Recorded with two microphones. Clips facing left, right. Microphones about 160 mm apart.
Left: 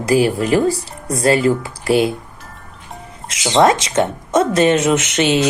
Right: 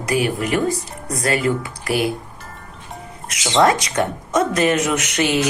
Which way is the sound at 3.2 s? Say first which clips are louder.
Left 3 dB; 25° left (ahead or behind).